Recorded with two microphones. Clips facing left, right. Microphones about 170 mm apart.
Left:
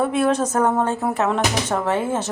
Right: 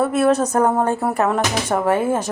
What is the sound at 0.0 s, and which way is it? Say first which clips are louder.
Speech: right 3 dB; 5° right (ahead or behind).